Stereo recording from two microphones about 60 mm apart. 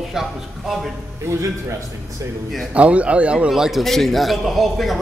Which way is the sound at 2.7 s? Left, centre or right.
Right.